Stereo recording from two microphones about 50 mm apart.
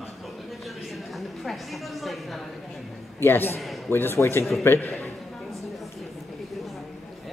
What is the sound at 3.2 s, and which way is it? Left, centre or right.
Speech, left.